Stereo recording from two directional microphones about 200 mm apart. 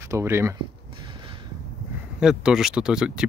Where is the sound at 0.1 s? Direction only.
10° right (ahead or behind).